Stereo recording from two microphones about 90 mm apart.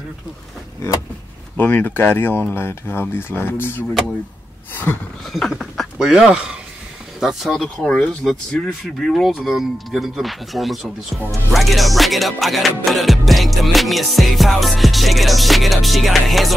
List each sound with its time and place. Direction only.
1.6 s speech: 20° left (ahead or behind)
4.9 s speech: 25° left (ahead or behind)
5.3 s music: centre (ahead or behind)
7.2 s speech: 5° right (ahead or behind)
8.3 s music: 5° left (ahead or behind)